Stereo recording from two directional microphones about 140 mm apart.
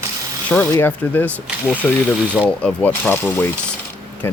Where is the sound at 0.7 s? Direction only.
15° left (ahead or behind).